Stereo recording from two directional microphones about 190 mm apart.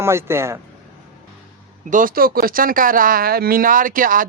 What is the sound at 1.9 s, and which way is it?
Speech, 45° right (ahead or behind).